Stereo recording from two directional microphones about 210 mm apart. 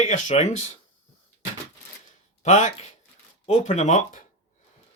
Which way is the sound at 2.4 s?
35° left (ahead or behind).